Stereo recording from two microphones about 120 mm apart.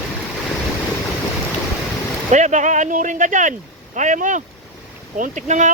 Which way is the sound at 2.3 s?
90° right.